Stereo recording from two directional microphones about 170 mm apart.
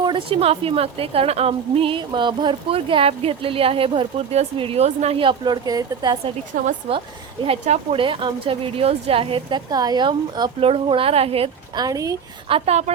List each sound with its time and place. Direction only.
0.0 s a woman's voice: 30° right (ahead or behind)
6.5 s speech: 50° right (ahead or behind)
7.4 s a woman's voice: 40° right (ahead or behind); by 12.1 s 20° right (ahead or behind)
12.5 s a woman's voice: 35° right (ahead or behind)